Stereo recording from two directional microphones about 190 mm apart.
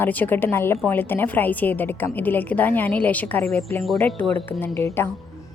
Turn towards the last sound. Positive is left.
turn(degrees=10)  # may be behind; listen again after turning